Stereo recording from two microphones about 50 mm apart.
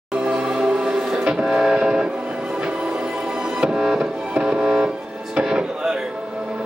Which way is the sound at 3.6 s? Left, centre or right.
Centre.